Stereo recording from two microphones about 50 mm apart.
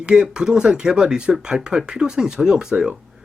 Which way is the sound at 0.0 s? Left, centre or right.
Centre.